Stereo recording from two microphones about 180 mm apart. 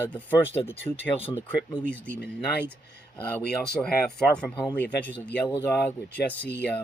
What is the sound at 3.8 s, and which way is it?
Speech, 5° left (ahead or behind).